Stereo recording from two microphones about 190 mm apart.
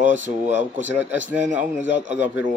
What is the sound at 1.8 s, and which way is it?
Speech, 40° right (ahead or behind).